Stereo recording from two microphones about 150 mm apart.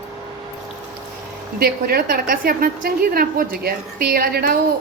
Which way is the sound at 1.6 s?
90° right.